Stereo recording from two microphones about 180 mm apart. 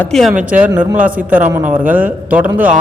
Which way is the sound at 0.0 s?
Centre (ahead or behind).